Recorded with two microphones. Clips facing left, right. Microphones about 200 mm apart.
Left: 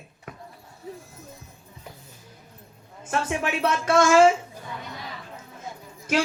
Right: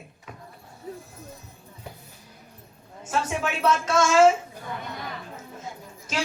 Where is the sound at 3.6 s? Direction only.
60° left (ahead or behind).